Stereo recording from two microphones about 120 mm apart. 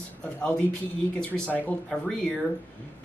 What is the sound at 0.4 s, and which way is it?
Speech, 5° left (ahead or behind).